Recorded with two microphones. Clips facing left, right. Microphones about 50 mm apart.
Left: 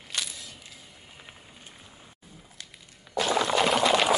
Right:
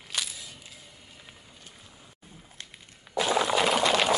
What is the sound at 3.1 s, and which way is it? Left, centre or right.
Water, centre.